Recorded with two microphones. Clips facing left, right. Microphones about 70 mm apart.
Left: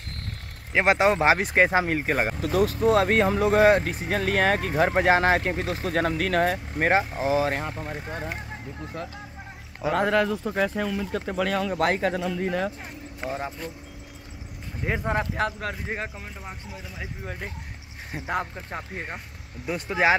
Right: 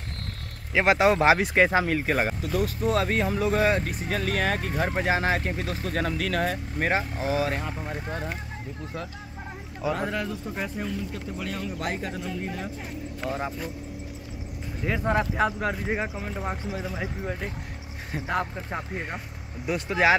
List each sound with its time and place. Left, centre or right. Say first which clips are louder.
0.7 s speech: even; centre
1.6 s speech: left 1 dB; centre
2.4 s speech: left 5 dB; left
7.7 s speech: even; centre
9.9 s speech: left 7 dB; left
11.7 s speech: left 8 dB; left
13.2 s speech: even; left
14.8 s speech: even; left
15.3 s speech: right 3 dB; centre
16.3 s speech: right 8 dB; right
18.1 s speech: right 1 dB; centre
18.4 s speech: right 2 dB; centre